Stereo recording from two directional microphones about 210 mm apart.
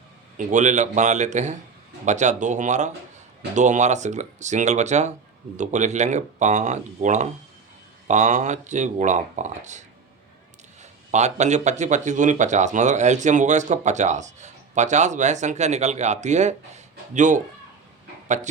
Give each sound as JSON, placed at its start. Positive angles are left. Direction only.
{"t": 0.3, "sound": "speech", "side_deg": -35}
{"t": 11.1, "sound": "speech", "side_deg": -35}